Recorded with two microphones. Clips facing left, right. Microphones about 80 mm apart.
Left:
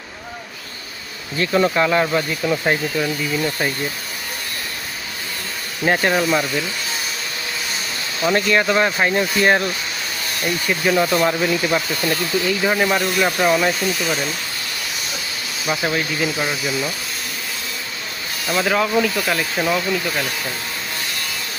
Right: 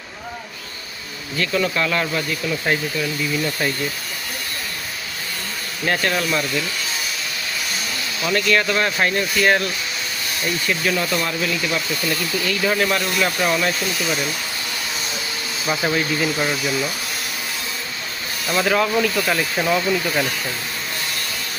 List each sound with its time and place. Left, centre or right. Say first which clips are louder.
1.4 s speech: left 4 dB; left
5.8 s speech: left 4 dB; centre
8.2 s speech: left 2 dB; left
11.2 s speech: left 5 dB; left
13.7 s speech: left 2 dB; centre
15.8 s speech: right 1 dB; centre
18.4 s speech: even; centre